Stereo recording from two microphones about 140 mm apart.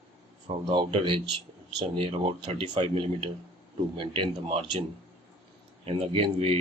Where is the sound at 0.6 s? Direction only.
35° right (ahead or behind).